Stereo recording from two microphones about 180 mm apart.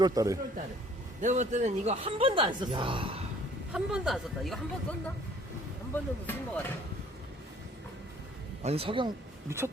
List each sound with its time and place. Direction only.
0.0 s a man's voice: 20° right (ahead or behind)
1.2 s speech: 40° right (ahead or behind)
3.7 s speech: 5° right (ahead or behind)
5.9 s speech: 10° left (ahead or behind)
8.6 s speech: 35° right (ahead or behind)
9.5 s speech: 15° right (ahead or behind)